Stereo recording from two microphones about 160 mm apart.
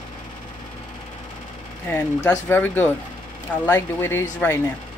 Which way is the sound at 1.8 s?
10° left (ahead or behind).